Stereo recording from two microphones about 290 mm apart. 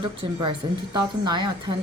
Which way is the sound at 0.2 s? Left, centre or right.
Centre.